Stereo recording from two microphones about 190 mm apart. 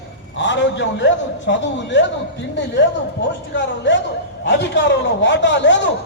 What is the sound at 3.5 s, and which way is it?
A man's voice, 70° left (ahead or behind).